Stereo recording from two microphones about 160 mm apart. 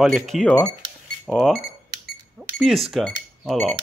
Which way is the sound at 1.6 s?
75° right (ahead or behind).